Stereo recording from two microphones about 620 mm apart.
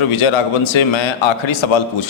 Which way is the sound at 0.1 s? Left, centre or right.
Left.